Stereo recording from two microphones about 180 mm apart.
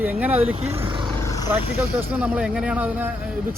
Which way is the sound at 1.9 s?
5° right (ahead or behind).